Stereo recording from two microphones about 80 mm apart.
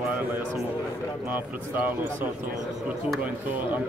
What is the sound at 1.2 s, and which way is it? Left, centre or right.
Speech, right.